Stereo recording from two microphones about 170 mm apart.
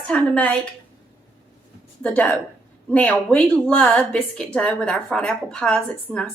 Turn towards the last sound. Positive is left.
turn(degrees=0)  # may be behind; listen again after turning